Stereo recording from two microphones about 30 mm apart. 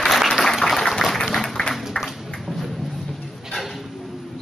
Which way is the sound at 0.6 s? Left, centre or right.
Centre.